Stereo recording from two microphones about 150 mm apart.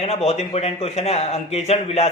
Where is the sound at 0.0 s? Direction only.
45° left (ahead or behind).